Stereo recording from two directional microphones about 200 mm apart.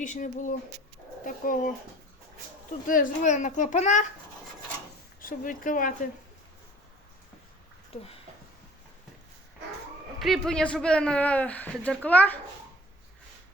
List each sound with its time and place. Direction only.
0.0 s a child's voice: 40° left (ahead or behind)
2.8 s a child's voice: 40° left (ahead or behind)
5.2 s a child's voice: 40° left (ahead or behind)
10.2 s a man's voice: centre (ahead or behind)